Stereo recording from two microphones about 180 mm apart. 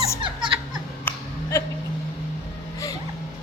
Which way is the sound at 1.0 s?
20° left (ahead or behind).